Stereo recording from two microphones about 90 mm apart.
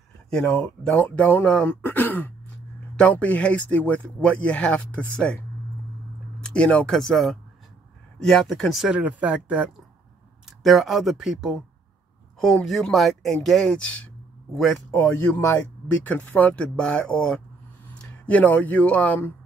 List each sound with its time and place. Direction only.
0.3 s speech: 10° left (ahead or behind)
6.4 s speech: 10° left (ahead or behind)
8.8 s speech: 15° right (ahead or behind)
10.6 s speech: centre (ahead or behind)
12.6 s speech: centre (ahead or behind)
15.3 s speech: 20° left (ahead or behind)